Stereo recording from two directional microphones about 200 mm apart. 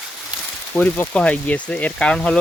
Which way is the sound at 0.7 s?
10° left (ahead or behind).